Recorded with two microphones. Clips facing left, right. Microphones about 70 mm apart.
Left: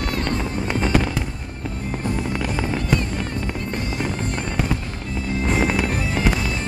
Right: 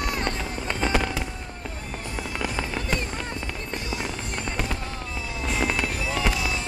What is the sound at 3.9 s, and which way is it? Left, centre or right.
Music, left.